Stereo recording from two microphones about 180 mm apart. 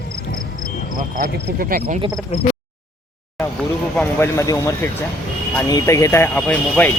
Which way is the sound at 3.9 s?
10° left (ahead or behind).